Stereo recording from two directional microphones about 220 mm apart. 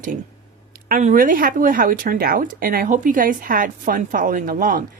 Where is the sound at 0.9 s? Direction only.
40° right (ahead or behind).